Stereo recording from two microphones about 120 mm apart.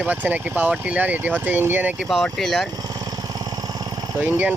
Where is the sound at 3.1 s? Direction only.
35° right (ahead or behind).